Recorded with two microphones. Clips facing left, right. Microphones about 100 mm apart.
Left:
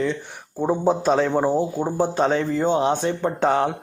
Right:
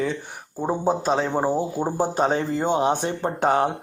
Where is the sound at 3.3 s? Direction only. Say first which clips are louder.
Right 1 dB; 40° right (ahead or behind).